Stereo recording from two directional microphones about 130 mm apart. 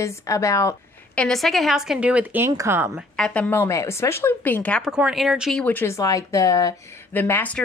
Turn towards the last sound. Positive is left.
turn(degrees=10)  # may be behind; listen again after turning